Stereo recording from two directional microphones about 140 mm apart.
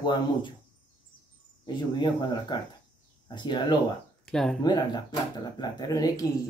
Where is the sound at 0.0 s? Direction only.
35° left (ahead or behind).